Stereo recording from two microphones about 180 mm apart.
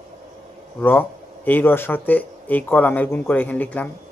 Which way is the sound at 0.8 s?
10° left (ahead or behind).